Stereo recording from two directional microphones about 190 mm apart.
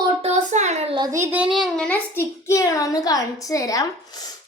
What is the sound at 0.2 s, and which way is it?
A child's voice, 35° right (ahead or behind).